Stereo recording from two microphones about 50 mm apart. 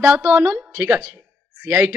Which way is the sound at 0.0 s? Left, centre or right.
Right.